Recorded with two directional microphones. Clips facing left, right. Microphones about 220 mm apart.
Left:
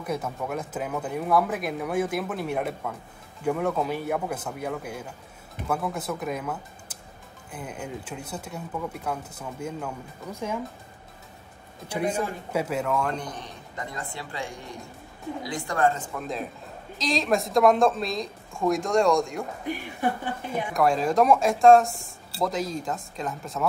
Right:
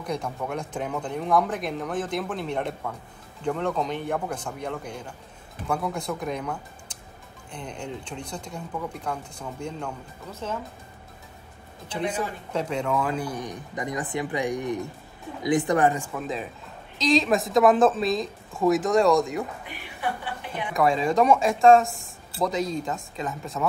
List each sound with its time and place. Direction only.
0.0 s speech: 5° left (ahead or behind)
11.9 s a man's voice: 10° left (ahead or behind); by 16.1 s 15° right (ahead or behind)
16.2 s speech: centre (ahead or behind)
19.7 s speech: 45° left (ahead or behind)
20.7 s speech: centre (ahead or behind)